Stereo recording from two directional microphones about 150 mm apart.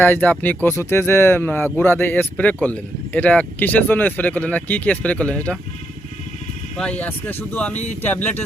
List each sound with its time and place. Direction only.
0.0 s speech: 10° left (ahead or behind)
6.7 s speech: 10° left (ahead or behind)